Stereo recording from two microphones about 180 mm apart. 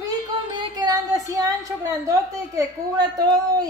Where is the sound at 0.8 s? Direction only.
20° right (ahead or behind).